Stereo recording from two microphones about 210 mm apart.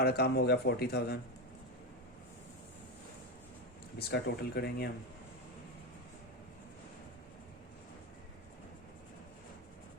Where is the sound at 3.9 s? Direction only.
50° left (ahead or behind).